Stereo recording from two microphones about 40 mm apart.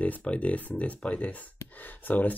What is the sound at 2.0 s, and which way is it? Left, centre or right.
Speech, left.